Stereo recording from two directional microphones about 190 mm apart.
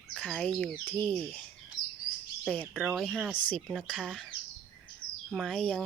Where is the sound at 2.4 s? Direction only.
5° left (ahead or behind).